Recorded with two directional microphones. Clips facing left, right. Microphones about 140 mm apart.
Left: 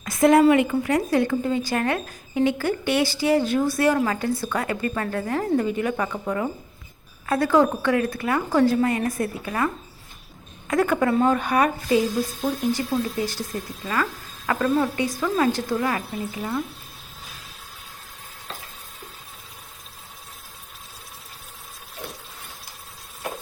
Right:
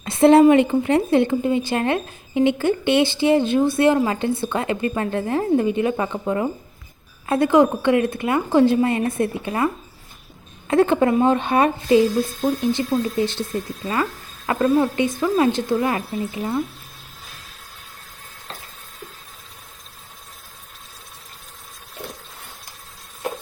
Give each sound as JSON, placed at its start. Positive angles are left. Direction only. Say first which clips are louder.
{"t": 0.0, "sound": "a sound", "louder": "right 4 dB", "side_deg": -30}
{"t": 0.5, "sound": "speech", "louder": "right 4 dB", "side_deg": -30}
{"t": 10.7, "sound": "speech", "louder": "right 4 dB", "side_deg": -25}
{"t": 12.3, "sound": "speech", "louder": "right 4 dB", "side_deg": 0}
{"t": 13.1, "sound": "speech", "louder": "right 5 dB", "side_deg": -25}